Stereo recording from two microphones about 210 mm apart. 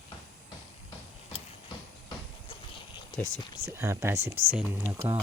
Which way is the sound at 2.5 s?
20° left (ahead or behind).